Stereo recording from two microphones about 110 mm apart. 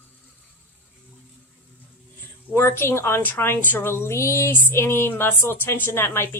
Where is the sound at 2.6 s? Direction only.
20° left (ahead or behind).